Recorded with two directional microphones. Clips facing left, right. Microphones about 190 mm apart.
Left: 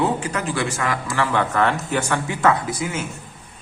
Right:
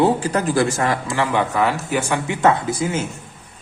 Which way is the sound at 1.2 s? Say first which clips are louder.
Even; 15° right (ahead or behind).